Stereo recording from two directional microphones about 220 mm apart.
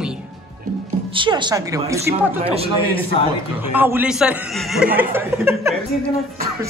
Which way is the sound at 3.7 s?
10° right (ahead or behind).